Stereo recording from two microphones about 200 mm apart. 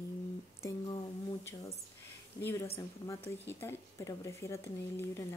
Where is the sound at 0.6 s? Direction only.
15° left (ahead or behind).